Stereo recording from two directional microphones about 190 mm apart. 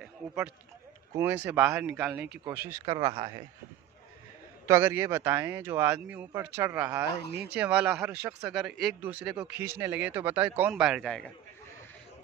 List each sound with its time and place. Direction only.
0.0 s run: 5° right (ahead or behind)
1.1 s speech: 10° right (ahead or behind)
2.7 s speech: 20° right (ahead or behind)
4.6 s speech: 15° right (ahead or behind); by 11.3 s 5° left (ahead or behind)